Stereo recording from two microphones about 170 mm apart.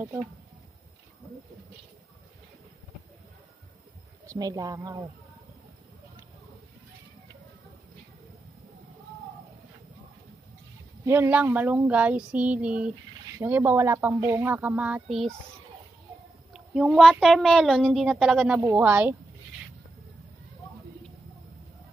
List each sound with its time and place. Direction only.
4.3 s speech: 20° right (ahead or behind)
11.1 s speech: 10° right (ahead or behind)
16.5 s a child's voice: 5° right (ahead or behind)